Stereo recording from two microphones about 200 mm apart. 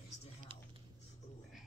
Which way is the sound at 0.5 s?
25° right (ahead or behind).